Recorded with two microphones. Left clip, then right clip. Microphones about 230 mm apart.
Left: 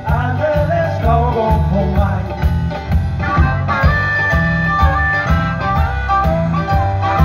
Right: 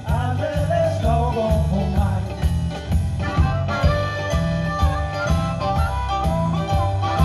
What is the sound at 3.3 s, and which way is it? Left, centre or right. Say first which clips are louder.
Music: left 8 dB; left.